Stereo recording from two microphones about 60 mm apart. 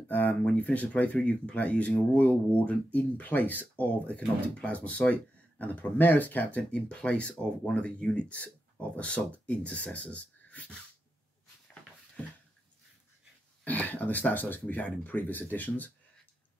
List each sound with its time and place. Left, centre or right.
0.1 s speech: left
6.7 s speech: centre
13.7 s speech: left